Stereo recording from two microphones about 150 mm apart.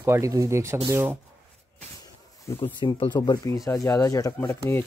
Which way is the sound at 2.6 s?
35° left (ahead or behind).